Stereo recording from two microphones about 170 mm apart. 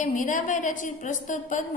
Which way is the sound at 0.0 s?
50° left (ahead or behind).